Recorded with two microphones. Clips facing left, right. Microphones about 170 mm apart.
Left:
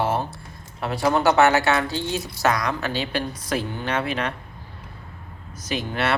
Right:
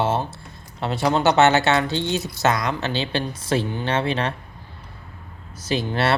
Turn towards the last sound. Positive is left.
turn(degrees=-30)  # may be behind; listen again after turning